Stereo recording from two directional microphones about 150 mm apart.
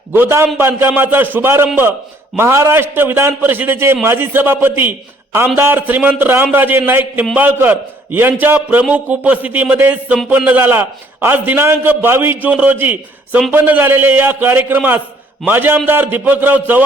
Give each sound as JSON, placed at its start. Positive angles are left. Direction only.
{"t": 0.1, "sound": "a man's voice", "side_deg": -15}